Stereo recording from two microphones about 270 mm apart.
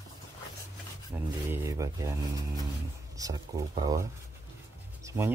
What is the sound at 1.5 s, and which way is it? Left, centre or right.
Speech, centre.